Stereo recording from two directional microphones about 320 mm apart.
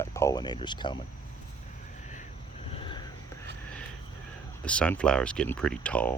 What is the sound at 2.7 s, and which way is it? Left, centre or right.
Vehicle, centre.